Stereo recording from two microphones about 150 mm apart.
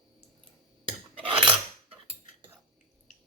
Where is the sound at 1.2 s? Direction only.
35° right (ahead or behind).